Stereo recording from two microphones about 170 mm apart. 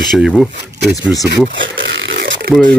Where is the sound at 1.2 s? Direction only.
90° right.